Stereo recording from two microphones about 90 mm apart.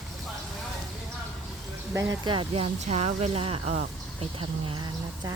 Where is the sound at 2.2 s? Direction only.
65° right (ahead or behind).